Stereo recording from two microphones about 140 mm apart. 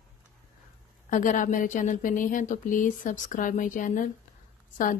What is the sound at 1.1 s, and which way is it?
A woman's voice, 65° left (ahead or behind).